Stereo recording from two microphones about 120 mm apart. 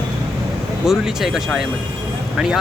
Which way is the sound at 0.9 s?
5° right (ahead or behind).